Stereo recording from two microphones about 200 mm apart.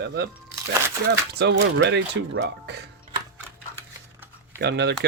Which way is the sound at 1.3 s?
55° right (ahead or behind).